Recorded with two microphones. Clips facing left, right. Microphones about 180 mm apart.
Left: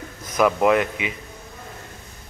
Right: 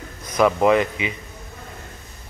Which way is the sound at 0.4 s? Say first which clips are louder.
Right 1 dB; centre (ahead or behind).